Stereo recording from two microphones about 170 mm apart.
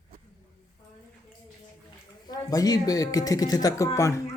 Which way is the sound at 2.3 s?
20° left (ahead or behind).